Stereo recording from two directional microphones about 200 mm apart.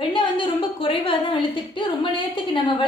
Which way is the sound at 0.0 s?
25° left (ahead or behind).